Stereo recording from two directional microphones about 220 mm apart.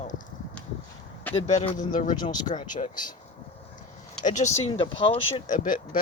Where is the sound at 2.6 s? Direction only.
35° left (ahead or behind).